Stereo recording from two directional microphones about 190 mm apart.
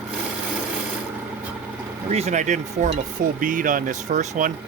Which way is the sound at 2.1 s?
35° right (ahead or behind).